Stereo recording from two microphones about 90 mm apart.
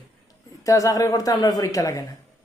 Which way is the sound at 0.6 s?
40° left (ahead or behind).